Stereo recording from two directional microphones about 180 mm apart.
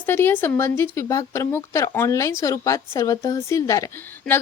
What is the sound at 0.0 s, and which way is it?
Speech, 10° left (ahead or behind).